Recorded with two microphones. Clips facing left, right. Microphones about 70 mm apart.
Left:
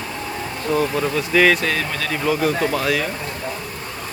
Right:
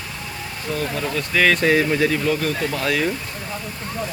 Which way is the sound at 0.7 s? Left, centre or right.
Centre.